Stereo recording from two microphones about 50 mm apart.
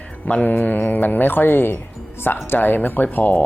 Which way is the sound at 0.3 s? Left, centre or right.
Left.